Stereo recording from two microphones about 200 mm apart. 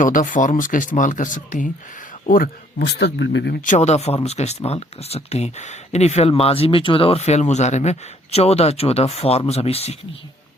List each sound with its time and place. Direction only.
0.0 s speech: 40° left (ahead or behind); by 3.6 s 60° left (ahead or behind)
3.6 s speech: 35° left (ahead or behind)